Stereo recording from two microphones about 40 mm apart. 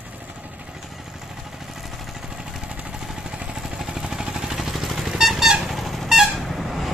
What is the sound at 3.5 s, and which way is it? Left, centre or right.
Vehicle, centre.